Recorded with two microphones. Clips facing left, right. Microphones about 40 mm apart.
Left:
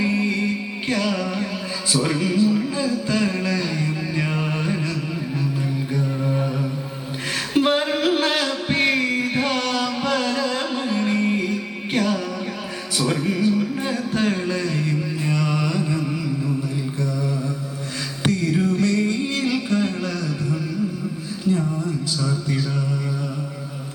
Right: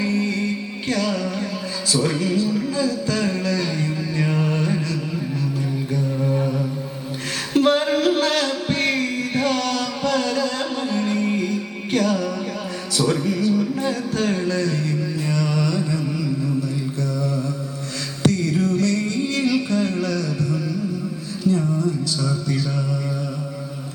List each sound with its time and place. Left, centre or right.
0.0 s music: left
1.9 s speech: centre
5.9 s a sound: centre
7.5 s music: centre
13.1 s a sound: left
17.0 s mantra: centre
18.2 s music: left